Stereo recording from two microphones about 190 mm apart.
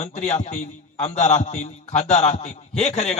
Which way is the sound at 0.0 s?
40° left (ahead or behind).